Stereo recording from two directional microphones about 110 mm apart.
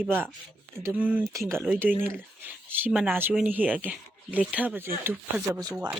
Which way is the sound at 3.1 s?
20° right (ahead or behind).